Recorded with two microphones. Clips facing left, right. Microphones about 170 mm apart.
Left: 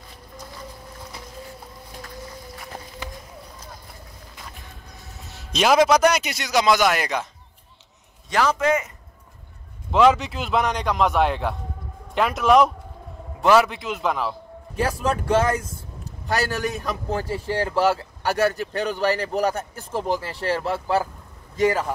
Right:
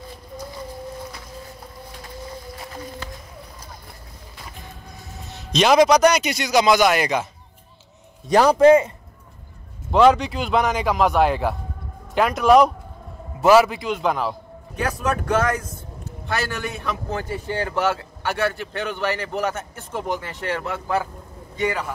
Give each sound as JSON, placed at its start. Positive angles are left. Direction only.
{"t": 5.3, "sound": "a man's voice", "side_deg": 5}
{"t": 8.3, "sound": "a man's voice", "side_deg": -35}
{"t": 9.8, "sound": "a man's voice", "side_deg": 0}
{"t": 14.8, "sound": "speech", "side_deg": 30}
{"t": 16.3, "sound": "a man's voice", "side_deg": 40}